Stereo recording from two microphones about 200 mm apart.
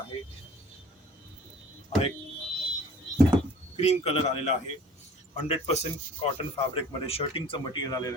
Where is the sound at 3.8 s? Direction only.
30° left (ahead or behind).